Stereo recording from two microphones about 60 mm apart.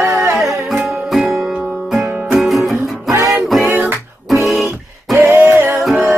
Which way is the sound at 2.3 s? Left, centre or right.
Centre.